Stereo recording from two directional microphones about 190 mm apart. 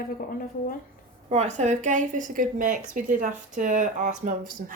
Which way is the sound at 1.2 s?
35° right (ahead or behind).